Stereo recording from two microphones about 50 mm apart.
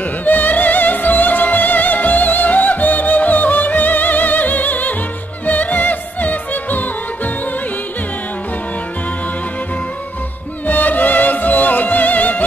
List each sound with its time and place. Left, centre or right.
0.2 s music: left
10.7 s music: left